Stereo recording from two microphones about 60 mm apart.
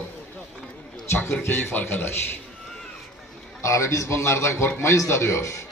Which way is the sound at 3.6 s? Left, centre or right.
Left.